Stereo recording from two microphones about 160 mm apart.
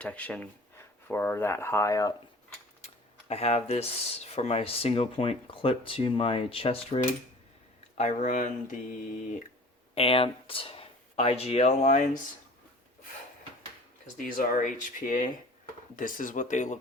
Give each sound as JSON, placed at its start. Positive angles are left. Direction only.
{"t": 0.0, "sound": "speech", "side_deg": 10}
{"t": 2.8, "sound": "speech", "side_deg": 40}
{"t": 7.9, "sound": "speech", "side_deg": 50}
{"t": 9.9, "sound": "speech", "side_deg": 35}
{"t": 14.2, "sound": "speech", "side_deg": 60}